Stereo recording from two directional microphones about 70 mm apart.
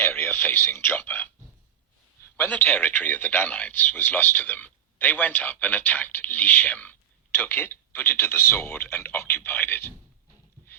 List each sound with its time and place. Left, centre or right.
0.0 s speech: left
2.3 s speech: left